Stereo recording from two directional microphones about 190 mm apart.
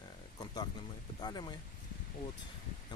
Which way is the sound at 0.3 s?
20° left (ahead or behind).